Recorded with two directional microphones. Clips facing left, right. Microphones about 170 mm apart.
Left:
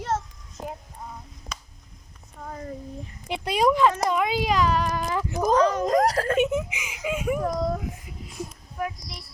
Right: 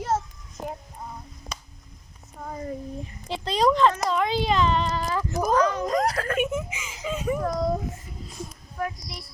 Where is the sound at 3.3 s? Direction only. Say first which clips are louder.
Even; 10° left (ahead or behind).